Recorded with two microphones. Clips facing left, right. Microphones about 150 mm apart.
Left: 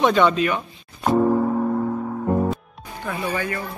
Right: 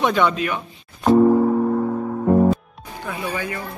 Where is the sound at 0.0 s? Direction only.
10° right (ahead or behind).